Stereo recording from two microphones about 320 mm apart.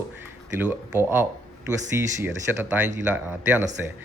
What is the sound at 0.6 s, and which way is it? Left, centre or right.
Speech, centre.